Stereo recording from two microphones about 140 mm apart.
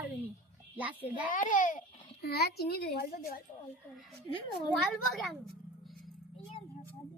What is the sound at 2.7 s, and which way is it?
Speech, 90° left.